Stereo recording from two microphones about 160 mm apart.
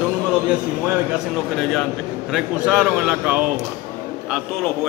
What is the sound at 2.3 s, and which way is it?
A man's voice, 5° right (ahead or behind).